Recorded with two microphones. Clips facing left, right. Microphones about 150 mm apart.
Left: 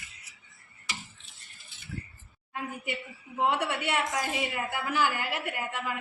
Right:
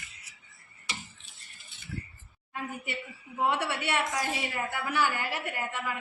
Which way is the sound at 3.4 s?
5° left (ahead or behind).